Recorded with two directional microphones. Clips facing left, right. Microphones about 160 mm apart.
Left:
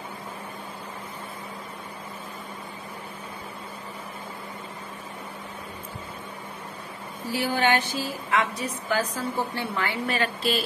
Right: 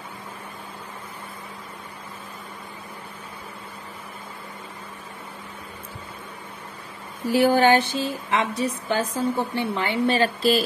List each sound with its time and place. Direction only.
7.3 s speech: 50° right (ahead or behind)
7.6 s a woman's voice: 30° right (ahead or behind)